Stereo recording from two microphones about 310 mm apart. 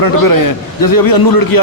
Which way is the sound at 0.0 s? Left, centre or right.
Left.